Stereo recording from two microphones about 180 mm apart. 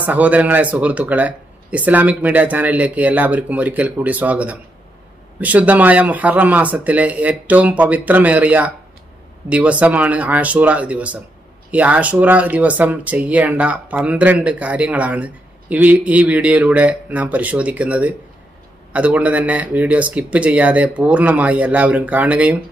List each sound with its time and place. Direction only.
0.0 s speech: 10° right (ahead or behind)